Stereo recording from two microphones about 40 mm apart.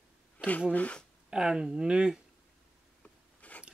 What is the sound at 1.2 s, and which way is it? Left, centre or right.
Speech, centre.